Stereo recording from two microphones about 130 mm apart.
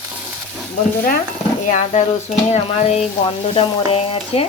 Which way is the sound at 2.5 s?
55° left (ahead or behind).